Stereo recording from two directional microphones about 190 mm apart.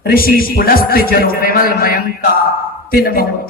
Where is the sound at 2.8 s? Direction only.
50° left (ahead or behind).